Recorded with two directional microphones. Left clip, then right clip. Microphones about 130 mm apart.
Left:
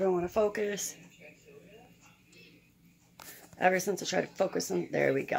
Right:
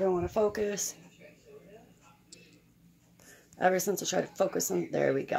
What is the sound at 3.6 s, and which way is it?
Speech, 20° right (ahead or behind).